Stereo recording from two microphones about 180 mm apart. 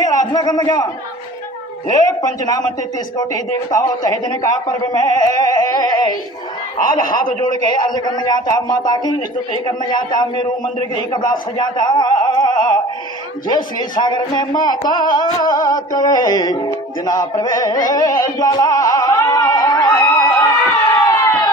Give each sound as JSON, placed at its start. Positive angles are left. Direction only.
{"t": 0.0, "sound": "a sound", "side_deg": 20}
{"t": 2.2, "sound": "a man's voice", "side_deg": 20}
{"t": 7.9, "sound": "a man's voice", "side_deg": 25}
{"t": 17.0, "sound": "music", "side_deg": 20}